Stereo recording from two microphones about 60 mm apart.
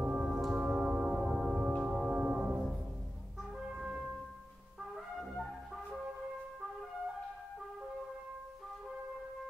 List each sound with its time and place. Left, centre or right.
0.0 s music: centre
4.9 s brass instrument: centre